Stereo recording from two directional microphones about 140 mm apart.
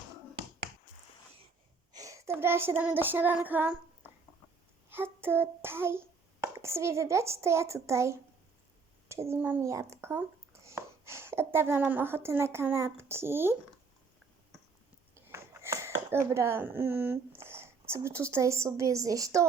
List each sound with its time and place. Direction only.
1.9 s child singing: 25° right (ahead or behind)
4.9 s hands: 15° right (ahead or behind)
9.0 s a child's voice: 20° right (ahead or behind)
15.1 s speech: 20° right (ahead or behind)